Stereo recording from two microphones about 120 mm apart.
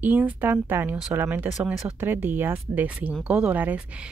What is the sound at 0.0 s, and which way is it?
Speech, 15° right (ahead or behind).